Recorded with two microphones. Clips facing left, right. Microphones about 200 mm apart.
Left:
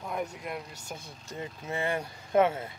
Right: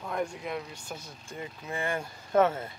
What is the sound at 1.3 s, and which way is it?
Speech, 25° left (ahead or behind).